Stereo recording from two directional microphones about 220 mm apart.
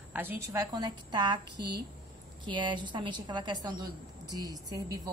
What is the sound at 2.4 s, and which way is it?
Speech, 20° right (ahead or behind).